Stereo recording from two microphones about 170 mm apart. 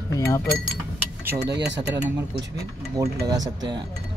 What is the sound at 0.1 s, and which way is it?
Speech, 15° left (ahead or behind).